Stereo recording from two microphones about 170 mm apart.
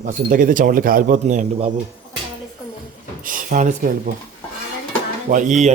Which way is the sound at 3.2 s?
50° right (ahead or behind).